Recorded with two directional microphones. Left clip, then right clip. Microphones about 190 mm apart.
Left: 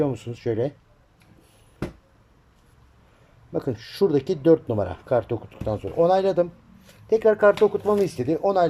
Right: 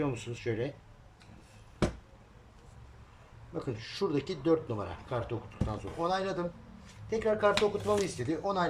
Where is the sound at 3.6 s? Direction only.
45° left (ahead or behind).